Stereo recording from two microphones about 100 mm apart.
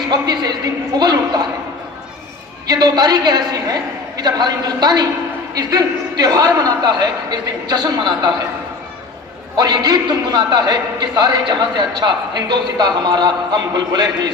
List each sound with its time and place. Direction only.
0.1 s a man's voice: 45° right (ahead or behind)
2.7 s a man's voice: 45° right (ahead or behind)
9.6 s a man's voice: 45° right (ahead or behind)